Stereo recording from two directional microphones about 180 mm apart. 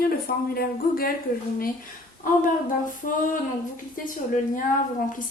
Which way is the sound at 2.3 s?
50° left (ahead or behind).